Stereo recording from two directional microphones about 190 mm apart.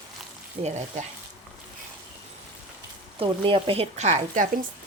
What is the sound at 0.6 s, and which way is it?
Speech, 40° right (ahead or behind).